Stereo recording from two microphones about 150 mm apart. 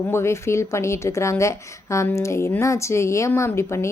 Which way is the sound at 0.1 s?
15° left (ahead or behind).